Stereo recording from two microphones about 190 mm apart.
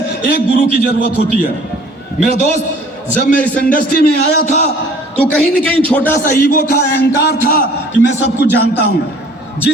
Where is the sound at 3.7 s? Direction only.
50° left (ahead or behind).